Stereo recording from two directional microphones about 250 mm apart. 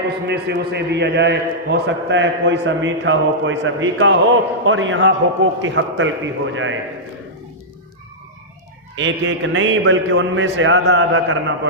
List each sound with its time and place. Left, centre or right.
0.3 s a man's voice: right
9.0 s a man's voice: right